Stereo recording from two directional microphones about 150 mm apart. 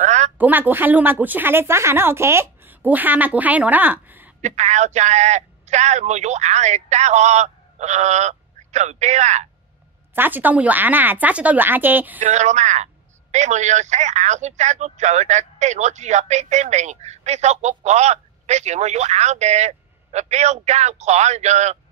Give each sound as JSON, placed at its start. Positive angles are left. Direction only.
{"t": 0.0, "sound": "a sound", "side_deg": -50}
{"t": 0.4, "sound": "a woman's voice", "side_deg": -10}
{"t": 4.4, "sound": "a man's voice", "side_deg": -50}
{"t": 10.1, "sound": "a woman's voice", "side_deg": -10}
{"t": 12.2, "sound": "a man's voice", "side_deg": -55}